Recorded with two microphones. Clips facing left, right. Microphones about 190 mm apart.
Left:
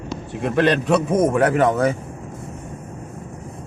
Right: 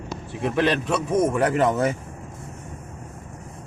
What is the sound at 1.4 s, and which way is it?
Speech, 50° left (ahead or behind).